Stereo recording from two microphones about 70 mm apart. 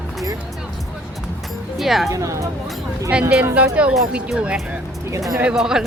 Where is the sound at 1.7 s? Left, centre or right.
Centre.